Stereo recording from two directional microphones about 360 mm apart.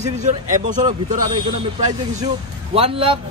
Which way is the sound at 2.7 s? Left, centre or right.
Centre.